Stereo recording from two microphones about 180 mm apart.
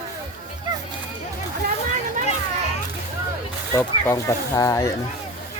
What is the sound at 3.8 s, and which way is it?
Speech, 15° left (ahead or behind).